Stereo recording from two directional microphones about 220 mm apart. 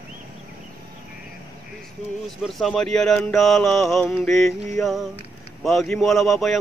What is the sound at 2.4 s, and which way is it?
Speech, centre (ahead or behind).